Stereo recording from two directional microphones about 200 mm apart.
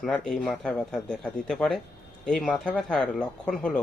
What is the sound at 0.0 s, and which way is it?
Speech, centre (ahead or behind).